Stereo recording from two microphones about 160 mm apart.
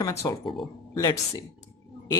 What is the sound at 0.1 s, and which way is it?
Speech, 20° left (ahead or behind).